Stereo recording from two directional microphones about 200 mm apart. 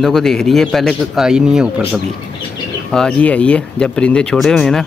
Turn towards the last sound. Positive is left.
turn(degrees=0)  # may be behind; listen again after turning